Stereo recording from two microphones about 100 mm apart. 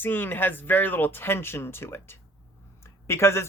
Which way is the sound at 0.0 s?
20° left (ahead or behind).